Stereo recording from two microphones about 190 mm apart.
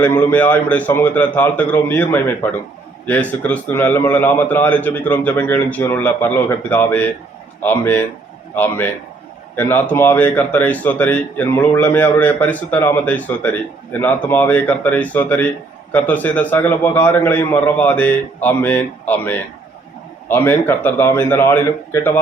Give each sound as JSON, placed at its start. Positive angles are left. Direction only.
{"t": 0.0, "sound": "a man's voice", "side_deg": 10}